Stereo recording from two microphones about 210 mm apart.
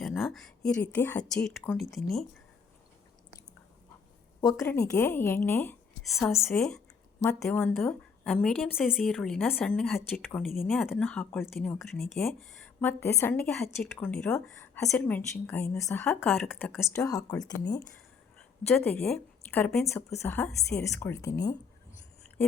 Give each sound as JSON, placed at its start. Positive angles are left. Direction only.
{"t": 0.0, "sound": "a woman's voice", "side_deg": 0}
{"t": 4.4, "sound": "speech", "side_deg": 15}
{"t": 6.3, "sound": "a woman's voice", "side_deg": 15}
{"t": 7.2, "sound": "a woman's voice", "side_deg": 15}
{"t": 16.0, "sound": "a woman's voice", "side_deg": 0}
{"t": 16.9, "sound": "a woman's voice", "side_deg": 15}
{"t": 18.9, "sound": "a woman's voice", "side_deg": 5}